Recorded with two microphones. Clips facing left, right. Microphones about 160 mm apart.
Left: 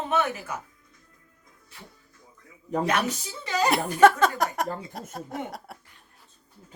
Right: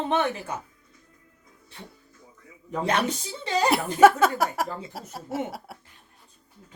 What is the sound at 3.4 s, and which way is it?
Speech, 30° right (ahead or behind).